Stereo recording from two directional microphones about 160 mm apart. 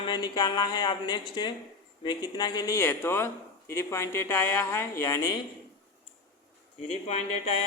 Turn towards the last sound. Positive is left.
turn(degrees=40)  # may be behind; listen again after turning